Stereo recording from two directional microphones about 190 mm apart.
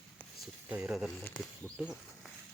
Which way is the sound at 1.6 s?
5° right (ahead or behind).